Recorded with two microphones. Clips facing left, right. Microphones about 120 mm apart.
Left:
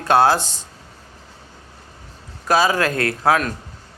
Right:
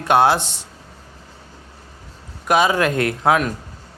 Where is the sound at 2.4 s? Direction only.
20° right (ahead or behind).